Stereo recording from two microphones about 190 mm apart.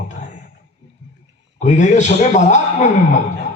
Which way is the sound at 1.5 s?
40° left (ahead or behind).